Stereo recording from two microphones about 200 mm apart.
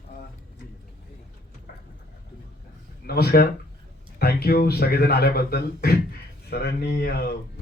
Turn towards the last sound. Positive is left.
turn(degrees=50)  # may be behind; listen again after turning